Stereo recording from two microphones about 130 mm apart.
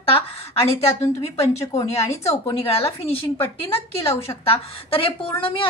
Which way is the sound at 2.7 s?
50° left (ahead or behind).